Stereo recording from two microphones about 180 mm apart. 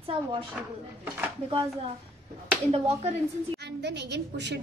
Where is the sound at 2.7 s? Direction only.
35° right (ahead or behind).